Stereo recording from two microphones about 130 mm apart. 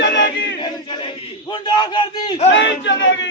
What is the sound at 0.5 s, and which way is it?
A man's voice, 40° left (ahead or behind).